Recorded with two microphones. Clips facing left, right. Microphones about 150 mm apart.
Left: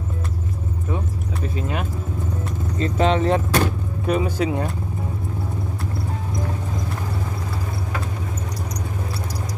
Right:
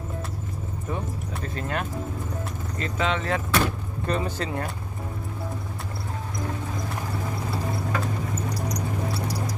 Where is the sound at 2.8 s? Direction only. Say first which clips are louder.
Left 7 dB; 35° left (ahead or behind).